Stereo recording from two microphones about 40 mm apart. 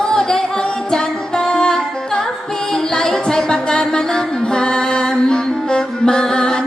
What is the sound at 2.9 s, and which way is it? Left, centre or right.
Music, centre.